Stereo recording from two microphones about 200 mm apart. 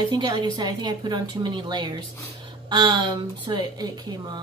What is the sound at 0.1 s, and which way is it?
A woman's voice, 20° right (ahead or behind).